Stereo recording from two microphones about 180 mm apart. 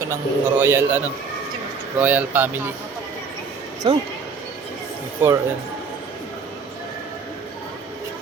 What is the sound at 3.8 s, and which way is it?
Speech, 25° right (ahead or behind).